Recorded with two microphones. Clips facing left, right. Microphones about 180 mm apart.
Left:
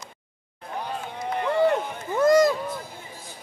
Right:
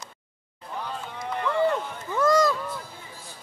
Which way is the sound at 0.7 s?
15° left (ahead or behind).